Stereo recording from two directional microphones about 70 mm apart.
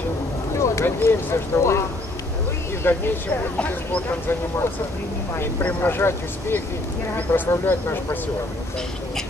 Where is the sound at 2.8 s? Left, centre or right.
Left.